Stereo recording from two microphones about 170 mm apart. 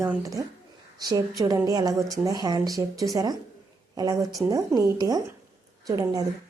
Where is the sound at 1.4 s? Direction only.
20° right (ahead or behind).